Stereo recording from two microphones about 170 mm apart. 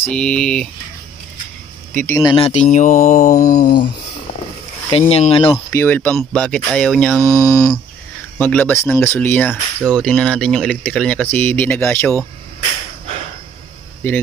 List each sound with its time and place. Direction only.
0.0 s speech: 5° left (ahead or behind)
2.0 s speech: 15° left (ahead or behind)
2.3 s mantra: 40° left (ahead or behind)
3.3 s mantra: 20° left (ahead or behind)
4.9 s speech: 35° left (ahead or behind)
5.7 s speech: 15° left (ahead or behind)
7.2 s speech: 15° right (ahead or behind)
7.4 s speech: 20° left (ahead or behind)
14.0 s speech: 10° left (ahead or behind)